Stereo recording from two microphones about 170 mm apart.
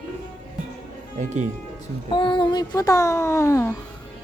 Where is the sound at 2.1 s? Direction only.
25° left (ahead or behind).